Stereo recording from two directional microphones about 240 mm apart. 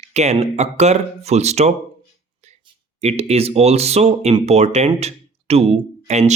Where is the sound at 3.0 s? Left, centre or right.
Right.